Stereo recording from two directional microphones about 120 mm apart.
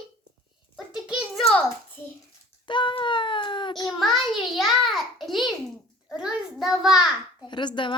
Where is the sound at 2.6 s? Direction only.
40° left (ahead or behind).